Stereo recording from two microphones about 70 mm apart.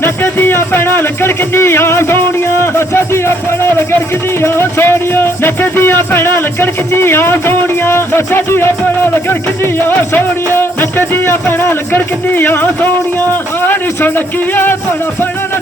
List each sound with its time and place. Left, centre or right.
0.0 s music: left
4.4 s speech: left
9.8 s music: left
13.6 s a man's voice: left